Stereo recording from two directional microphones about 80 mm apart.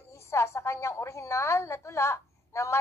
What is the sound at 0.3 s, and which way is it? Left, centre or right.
A woman's voice, left.